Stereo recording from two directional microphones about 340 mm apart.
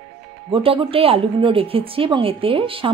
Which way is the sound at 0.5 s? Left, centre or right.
Centre.